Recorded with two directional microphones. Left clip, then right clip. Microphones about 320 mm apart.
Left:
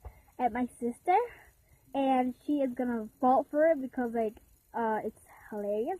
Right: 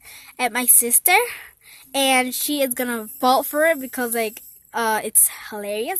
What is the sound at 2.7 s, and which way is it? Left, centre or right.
A woman's voice, right.